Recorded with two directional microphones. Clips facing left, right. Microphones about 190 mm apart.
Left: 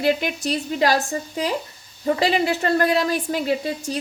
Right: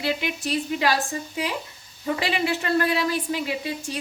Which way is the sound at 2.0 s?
40° left (ahead or behind).